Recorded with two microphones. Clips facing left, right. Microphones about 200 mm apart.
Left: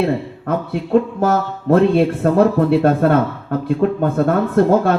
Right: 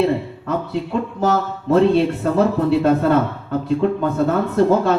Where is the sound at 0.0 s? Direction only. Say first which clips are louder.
Even; 55° left (ahead or behind).